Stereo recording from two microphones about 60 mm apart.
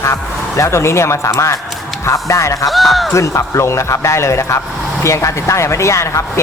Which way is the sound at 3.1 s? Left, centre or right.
Left.